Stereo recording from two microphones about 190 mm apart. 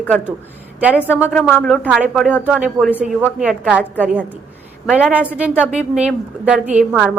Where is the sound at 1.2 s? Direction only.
5° left (ahead or behind).